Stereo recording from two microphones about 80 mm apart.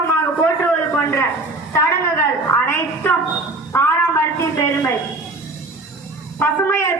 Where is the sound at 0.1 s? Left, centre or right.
Left.